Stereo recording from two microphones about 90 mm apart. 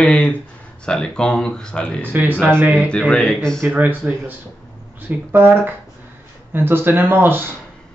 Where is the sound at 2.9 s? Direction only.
10° left (ahead or behind).